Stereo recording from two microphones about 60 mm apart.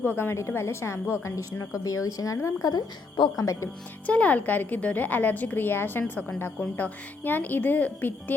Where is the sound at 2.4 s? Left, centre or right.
Left.